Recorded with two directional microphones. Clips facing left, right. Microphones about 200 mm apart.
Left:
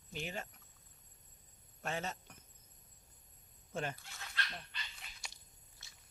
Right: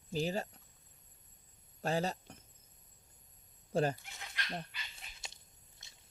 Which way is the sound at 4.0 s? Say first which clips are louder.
Left 1 dB; 20° right (ahead or behind).